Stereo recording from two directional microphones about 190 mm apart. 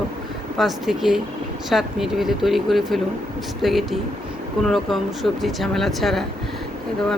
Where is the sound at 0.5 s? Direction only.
Centre (ahead or behind).